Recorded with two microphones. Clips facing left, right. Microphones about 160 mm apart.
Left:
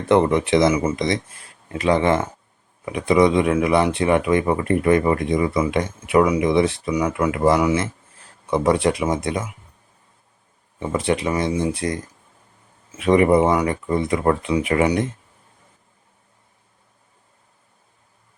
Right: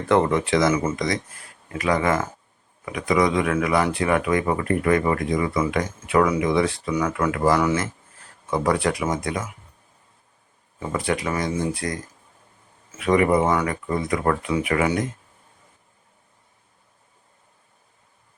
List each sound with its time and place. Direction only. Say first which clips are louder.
0.1 s speech: left 3 dB; 20° left (ahead or behind)
10.8 s speech: left 4 dB; 25° left (ahead or behind)
13.0 s speech: left 4 dB; 25° left (ahead or behind)